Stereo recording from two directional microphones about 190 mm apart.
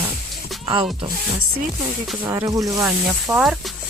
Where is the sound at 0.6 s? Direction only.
25° right (ahead or behind).